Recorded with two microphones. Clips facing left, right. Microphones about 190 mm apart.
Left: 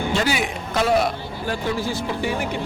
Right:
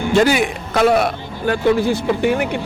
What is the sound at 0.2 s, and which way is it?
Speech, 55° right (ahead or behind).